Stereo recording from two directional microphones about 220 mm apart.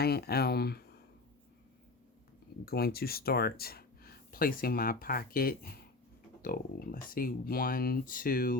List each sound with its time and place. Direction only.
0.0 s speech: 45° left (ahead or behind)
2.6 s speech: 45° left (ahead or behind)